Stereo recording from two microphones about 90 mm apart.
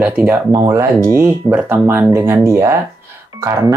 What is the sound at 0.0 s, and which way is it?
Speech, 15° right (ahead or behind).